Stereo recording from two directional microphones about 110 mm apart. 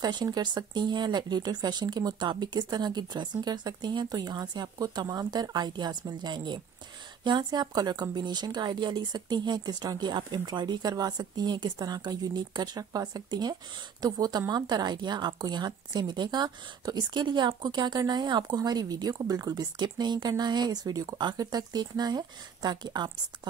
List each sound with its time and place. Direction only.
0.0 s a woman's voice: 40° right (ahead or behind)